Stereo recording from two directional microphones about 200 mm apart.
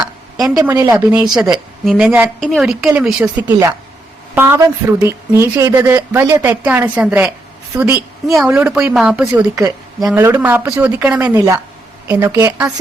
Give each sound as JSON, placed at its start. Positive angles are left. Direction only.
{"t": 0.5, "sound": "speech", "side_deg": -15}
{"t": 1.2, "sound": "speech", "side_deg": 0}
{"t": 9.6, "sound": "speech", "side_deg": -15}